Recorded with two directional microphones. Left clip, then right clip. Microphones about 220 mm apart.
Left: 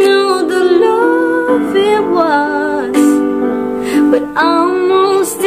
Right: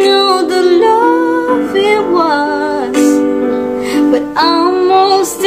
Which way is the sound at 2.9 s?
45° left (ahead or behind).